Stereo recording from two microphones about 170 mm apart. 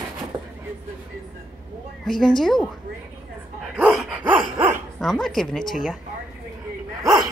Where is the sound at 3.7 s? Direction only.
5° right (ahead or behind).